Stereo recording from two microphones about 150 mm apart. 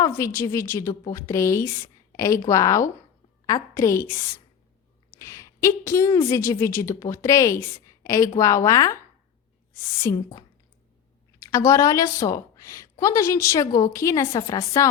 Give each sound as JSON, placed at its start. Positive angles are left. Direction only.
{"t": 0.0, "sound": "a woman's voice", "side_deg": 20}